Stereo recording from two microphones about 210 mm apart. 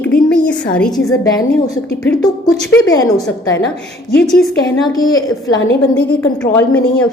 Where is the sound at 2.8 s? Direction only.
15° left (ahead or behind).